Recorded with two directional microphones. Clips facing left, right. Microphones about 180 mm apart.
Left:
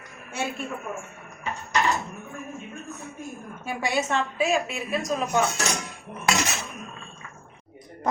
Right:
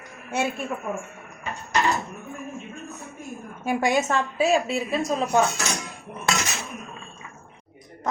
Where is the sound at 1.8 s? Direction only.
Centre (ahead or behind).